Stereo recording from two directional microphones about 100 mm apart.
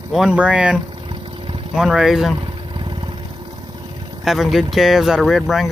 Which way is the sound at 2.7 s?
55° right (ahead or behind).